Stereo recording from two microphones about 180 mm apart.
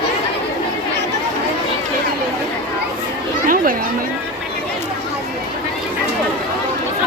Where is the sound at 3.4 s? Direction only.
50° right (ahead or behind).